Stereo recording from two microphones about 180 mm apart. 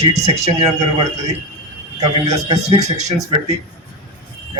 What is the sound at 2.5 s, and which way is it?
Speech, 35° right (ahead or behind).